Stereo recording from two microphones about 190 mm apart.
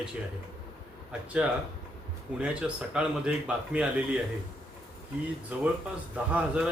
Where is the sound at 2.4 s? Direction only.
5° right (ahead or behind).